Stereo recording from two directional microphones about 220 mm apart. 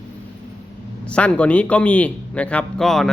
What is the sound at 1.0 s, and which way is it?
A man's voice, 5° left (ahead or behind).